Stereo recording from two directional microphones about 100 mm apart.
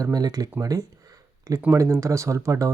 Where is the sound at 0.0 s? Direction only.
40° right (ahead or behind).